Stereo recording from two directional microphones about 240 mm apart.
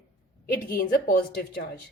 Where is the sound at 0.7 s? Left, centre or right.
Left.